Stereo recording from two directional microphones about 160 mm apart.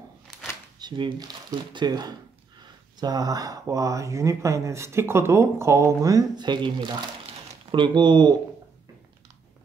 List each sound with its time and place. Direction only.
0.7 s speech: 30° right (ahead or behind)